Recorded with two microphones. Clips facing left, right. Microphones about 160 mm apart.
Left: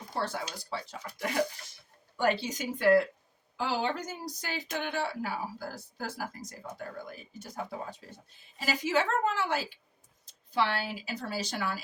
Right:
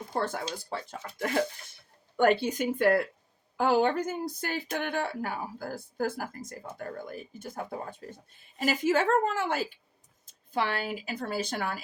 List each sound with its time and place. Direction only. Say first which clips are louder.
0.1 s speech: right 3 dB; 50° right (ahead or behind)